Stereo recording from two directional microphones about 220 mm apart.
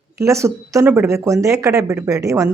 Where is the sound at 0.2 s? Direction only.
15° right (ahead or behind).